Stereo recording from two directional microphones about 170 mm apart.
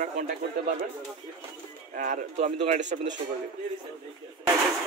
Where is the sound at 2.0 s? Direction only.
50° right (ahead or behind).